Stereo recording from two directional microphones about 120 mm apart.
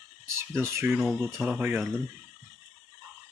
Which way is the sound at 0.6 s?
20° right (ahead or behind).